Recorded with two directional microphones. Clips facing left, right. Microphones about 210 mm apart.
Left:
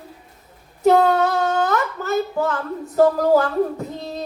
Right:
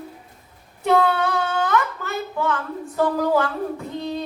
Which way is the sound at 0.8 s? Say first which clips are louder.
Left 4 dB; 40° left (ahead or behind).